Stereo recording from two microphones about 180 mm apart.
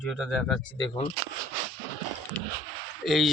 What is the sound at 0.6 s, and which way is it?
Speech, 25° left (ahead or behind).